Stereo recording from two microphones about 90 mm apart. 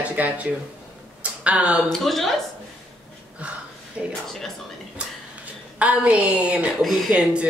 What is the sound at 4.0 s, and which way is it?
Speech, 10° right (ahead or behind).